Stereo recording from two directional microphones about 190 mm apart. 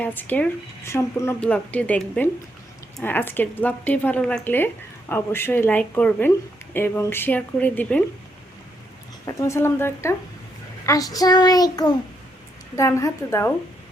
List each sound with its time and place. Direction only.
0.0 s a woman's voice: 10° left (ahead or behind)
9.2 s a woman's voice: 15° left (ahead or behind)